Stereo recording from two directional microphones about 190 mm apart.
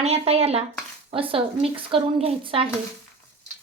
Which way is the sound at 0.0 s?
35° right (ahead or behind).